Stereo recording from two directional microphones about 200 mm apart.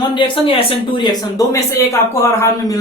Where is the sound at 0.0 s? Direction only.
25° left (ahead or behind).